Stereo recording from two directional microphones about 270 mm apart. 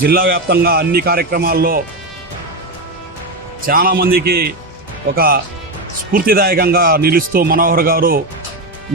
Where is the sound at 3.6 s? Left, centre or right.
Right.